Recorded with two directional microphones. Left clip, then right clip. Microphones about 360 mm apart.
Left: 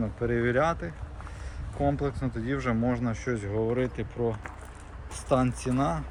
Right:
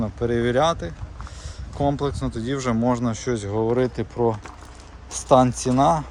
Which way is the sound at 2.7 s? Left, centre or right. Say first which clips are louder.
Right 9 dB; centre.